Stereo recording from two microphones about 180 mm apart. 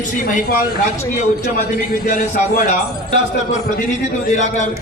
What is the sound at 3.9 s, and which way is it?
Speech, 40° left (ahead or behind).